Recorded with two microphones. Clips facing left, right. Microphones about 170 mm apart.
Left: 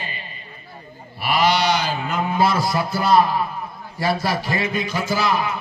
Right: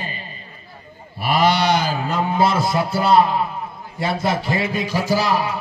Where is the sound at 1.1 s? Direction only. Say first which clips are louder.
Right 1 dB; 50° right (ahead or behind); by 3.4 s 25° right (ahead or behind).